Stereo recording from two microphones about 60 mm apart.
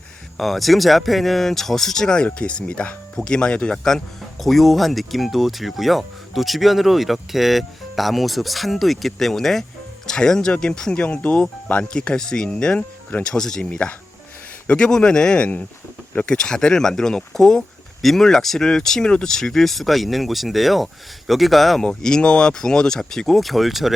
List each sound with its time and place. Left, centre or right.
0.3 s speech: centre
21.8 s speech: centre